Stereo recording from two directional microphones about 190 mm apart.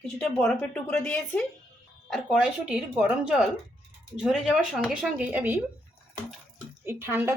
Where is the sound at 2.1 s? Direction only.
5° right (ahead or behind).